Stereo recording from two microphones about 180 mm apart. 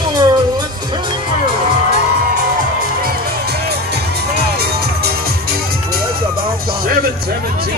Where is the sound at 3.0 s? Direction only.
65° right (ahead or behind).